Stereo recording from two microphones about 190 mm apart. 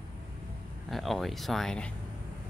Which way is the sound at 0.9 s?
Centre (ahead or behind).